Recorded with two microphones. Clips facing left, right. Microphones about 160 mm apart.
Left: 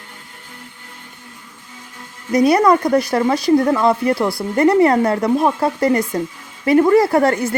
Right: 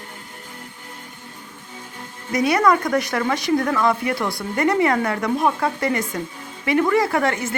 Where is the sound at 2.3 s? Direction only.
35° left (ahead or behind).